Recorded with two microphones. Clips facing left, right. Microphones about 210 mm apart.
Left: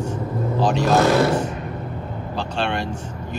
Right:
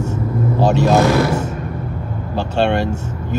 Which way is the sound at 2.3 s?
45° right (ahead or behind).